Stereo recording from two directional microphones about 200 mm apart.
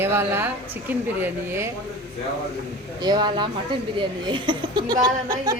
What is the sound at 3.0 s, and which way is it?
Speech, 20° right (ahead or behind).